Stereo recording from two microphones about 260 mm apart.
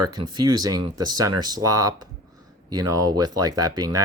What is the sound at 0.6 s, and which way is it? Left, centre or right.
Speech, centre.